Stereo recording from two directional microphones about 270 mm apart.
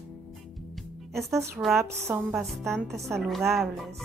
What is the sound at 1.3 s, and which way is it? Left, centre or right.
A woman's voice, centre.